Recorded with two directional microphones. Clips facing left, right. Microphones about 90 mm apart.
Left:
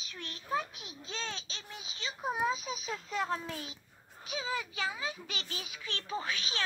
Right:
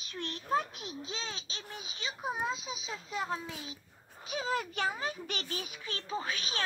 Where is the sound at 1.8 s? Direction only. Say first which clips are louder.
Even; 20° right (ahead or behind).